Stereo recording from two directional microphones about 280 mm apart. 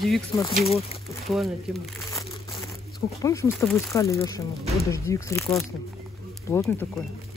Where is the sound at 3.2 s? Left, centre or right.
Centre.